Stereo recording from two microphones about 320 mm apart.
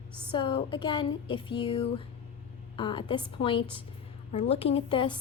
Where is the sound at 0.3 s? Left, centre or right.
Centre.